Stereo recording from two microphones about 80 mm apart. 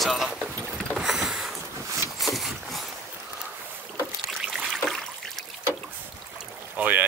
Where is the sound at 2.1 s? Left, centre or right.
Centre.